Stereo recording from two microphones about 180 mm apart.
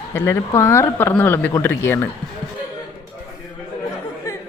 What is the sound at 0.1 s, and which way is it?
Speech, 15° left (ahead or behind).